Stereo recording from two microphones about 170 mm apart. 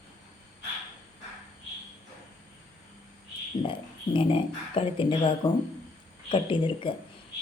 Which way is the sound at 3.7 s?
30° left (ahead or behind).